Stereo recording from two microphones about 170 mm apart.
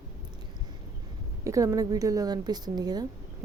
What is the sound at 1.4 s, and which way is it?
A woman's voice, 20° right (ahead or behind).